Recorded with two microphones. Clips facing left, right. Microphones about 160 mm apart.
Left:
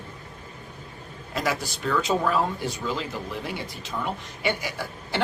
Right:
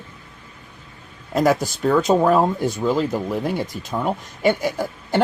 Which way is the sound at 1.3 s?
45° right (ahead or behind).